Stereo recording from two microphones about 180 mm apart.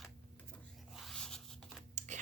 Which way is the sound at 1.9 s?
40° right (ahead or behind).